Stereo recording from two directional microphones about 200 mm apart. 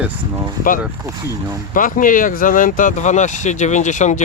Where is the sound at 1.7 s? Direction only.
40° left (ahead or behind).